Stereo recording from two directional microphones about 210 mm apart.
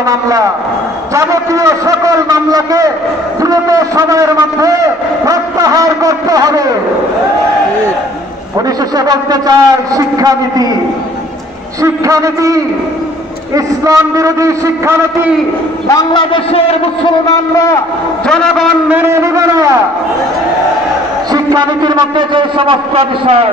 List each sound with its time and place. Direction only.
1.1 s a man's voice: 15° right (ahead or behind)
8.9 s a man's voice: 20° right (ahead or behind)
11.8 s a man's voice: 15° right (ahead or behind)
15.9 s a man's voice: 20° left (ahead or behind)
18.2 s a man's voice: centre (ahead or behind); by 19.7 s 15° right (ahead or behind)
21.3 s a man's voice: 20° right (ahead or behind)